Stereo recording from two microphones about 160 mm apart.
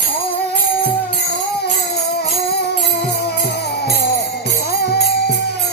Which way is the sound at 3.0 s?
80° left.